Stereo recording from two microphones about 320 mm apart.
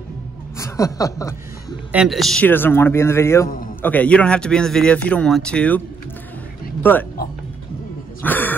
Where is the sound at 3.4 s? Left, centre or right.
Left.